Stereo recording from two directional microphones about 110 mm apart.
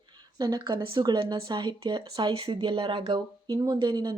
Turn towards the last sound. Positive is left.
turn(degrees=-40)  # may be behind; listen again after turning